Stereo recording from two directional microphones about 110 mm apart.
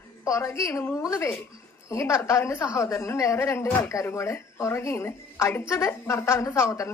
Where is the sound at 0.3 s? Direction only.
25° left (ahead or behind).